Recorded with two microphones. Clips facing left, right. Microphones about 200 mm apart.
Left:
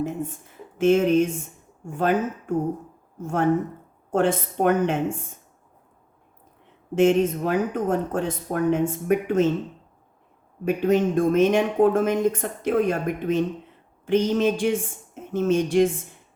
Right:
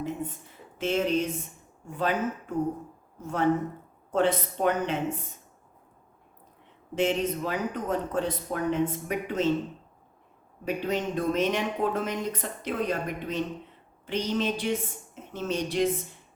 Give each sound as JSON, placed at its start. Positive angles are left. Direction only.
{"t": 0.0, "sound": "a woman's voice", "side_deg": 45}
{"t": 6.9, "sound": "speech", "side_deg": 50}
{"t": 10.7, "sound": "speech", "side_deg": 50}